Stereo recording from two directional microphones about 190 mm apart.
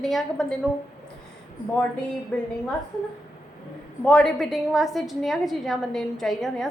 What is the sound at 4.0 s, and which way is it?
A woman's voice, 5° left (ahead or behind).